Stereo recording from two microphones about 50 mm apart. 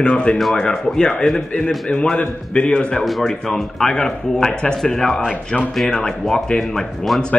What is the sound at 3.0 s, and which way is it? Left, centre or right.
Speech, centre.